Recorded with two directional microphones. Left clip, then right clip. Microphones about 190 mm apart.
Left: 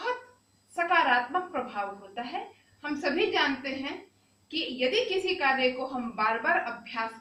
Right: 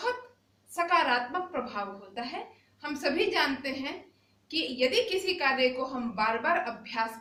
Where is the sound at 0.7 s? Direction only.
15° right (ahead or behind).